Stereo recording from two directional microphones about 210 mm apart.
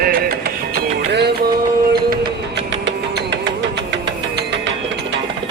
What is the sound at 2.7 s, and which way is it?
Music, 60° right (ahead or behind).